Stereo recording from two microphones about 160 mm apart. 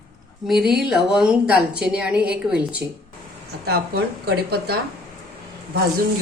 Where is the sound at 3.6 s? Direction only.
85° right.